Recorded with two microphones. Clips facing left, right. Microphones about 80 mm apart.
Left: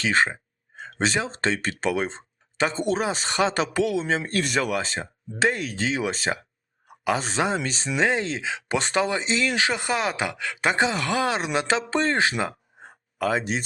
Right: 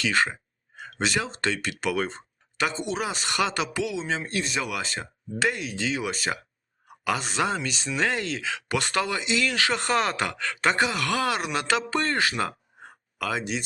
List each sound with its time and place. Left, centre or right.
0.0 s speech: left
2.0 s a sound: left
2.7 s speech: left
3.0 s speech: left
4.7 s speech: left